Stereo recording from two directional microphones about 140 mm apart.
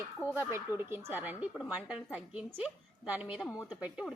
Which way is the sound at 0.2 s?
15° right (ahead or behind).